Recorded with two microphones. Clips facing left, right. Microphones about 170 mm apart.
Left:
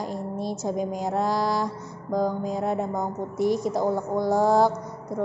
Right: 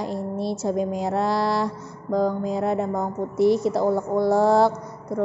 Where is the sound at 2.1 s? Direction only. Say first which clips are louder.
Right 3 dB; 10° left (ahead or behind).